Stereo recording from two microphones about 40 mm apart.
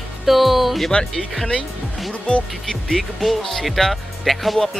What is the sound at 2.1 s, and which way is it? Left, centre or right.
Speech, left.